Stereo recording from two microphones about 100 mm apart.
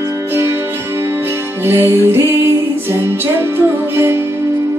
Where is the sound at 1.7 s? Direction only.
25° right (ahead or behind).